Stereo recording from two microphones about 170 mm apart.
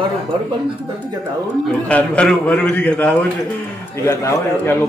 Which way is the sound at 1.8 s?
5° left (ahead or behind).